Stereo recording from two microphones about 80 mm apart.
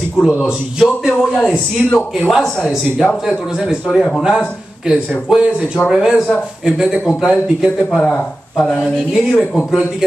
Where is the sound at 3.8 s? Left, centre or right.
Centre.